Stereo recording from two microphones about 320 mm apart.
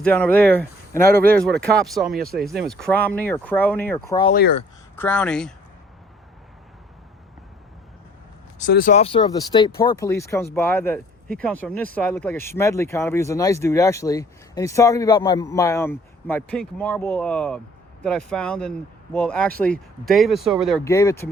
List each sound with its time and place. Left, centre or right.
0.0 s speech: centre
4.3 s speech: left
4.9 s speech: centre
8.5 s speech: left; by 21.2 s centre